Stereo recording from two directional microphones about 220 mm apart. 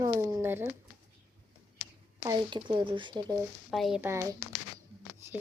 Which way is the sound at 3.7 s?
Centre (ahead or behind).